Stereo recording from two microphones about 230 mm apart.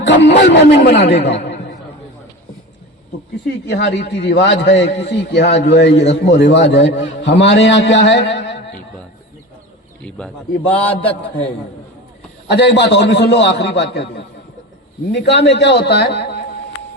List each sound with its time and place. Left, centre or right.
0.0 s a man's voice: left
3.7 s a man's voice: left
4.7 s a man's voice: left
5.0 s a man's voice: left
6.8 s a man's voice: left
7.2 s a man's voice: left
10.0 s speech: centre
10.6 s a man's voice: left
12.5 s a man's voice: left